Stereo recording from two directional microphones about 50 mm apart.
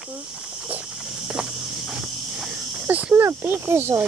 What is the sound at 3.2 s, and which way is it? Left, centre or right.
Speech, right.